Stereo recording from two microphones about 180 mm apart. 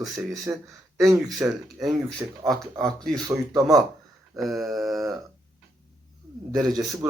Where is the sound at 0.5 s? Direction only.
10° right (ahead or behind).